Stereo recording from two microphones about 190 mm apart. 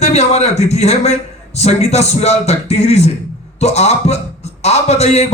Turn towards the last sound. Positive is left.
turn(degrees=35)  # may be behind; listen again after turning